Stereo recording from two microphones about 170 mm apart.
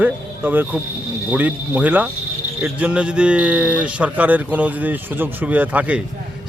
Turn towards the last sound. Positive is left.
turn(degrees=-10)  # may be behind; listen again after turning